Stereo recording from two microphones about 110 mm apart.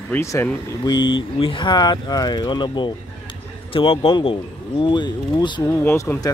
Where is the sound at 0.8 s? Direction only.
45° left (ahead or behind).